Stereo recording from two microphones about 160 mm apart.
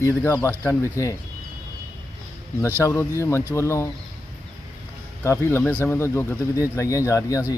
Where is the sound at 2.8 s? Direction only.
15° left (ahead or behind).